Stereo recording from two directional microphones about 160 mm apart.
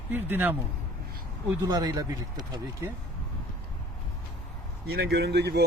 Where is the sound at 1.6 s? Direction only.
25° right (ahead or behind).